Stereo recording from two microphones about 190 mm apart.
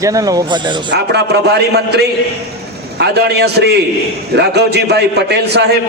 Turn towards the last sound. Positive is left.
turn(degrees=-60)  # may be behind; listen again after turning